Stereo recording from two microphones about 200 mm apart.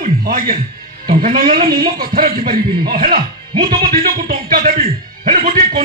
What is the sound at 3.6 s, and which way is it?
Speech, 45° right (ahead or behind).